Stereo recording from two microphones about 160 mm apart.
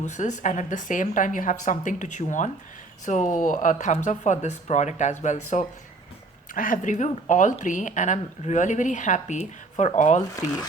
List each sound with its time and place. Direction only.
0.0 s speech: 45° left (ahead or behind)